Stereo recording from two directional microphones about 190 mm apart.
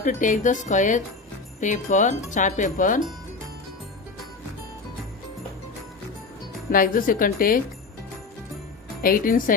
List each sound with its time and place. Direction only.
0.0 s speech: 40° left (ahead or behind)
6.7 s speech: 45° left (ahead or behind)
9.0 s speech: 45° left (ahead or behind)